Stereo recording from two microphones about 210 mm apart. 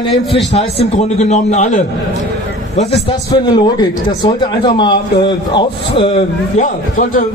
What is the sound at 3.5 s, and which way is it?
A man's voice, 20° left (ahead or behind).